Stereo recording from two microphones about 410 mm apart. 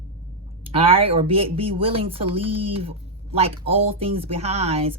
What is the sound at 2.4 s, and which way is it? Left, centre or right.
Speech, right.